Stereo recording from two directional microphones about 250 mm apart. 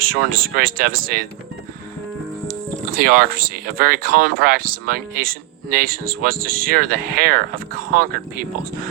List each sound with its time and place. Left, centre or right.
0.0 s speech: right
2.5 s speech: right